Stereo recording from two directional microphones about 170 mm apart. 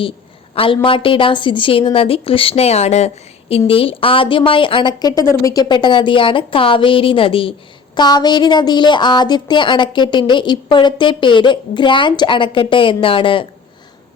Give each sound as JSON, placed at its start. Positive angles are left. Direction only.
{"t": 0.5, "sound": "a woman's voice", "side_deg": 30}